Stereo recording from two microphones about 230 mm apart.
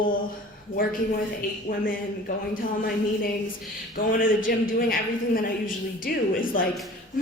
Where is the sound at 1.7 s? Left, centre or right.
Left.